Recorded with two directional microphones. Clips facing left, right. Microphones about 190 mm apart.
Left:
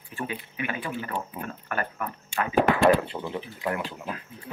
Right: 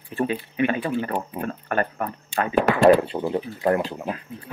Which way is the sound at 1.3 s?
40° right (ahead or behind).